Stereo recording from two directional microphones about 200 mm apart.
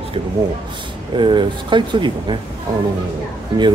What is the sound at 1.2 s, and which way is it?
Speech, 25° right (ahead or behind).